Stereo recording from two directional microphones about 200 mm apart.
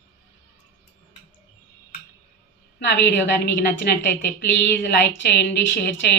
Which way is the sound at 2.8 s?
60° left (ahead or behind).